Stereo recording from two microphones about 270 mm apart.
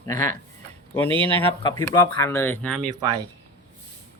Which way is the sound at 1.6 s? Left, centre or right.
Centre.